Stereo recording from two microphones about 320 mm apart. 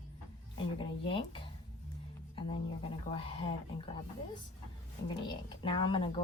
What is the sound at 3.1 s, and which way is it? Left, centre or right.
Speech, centre.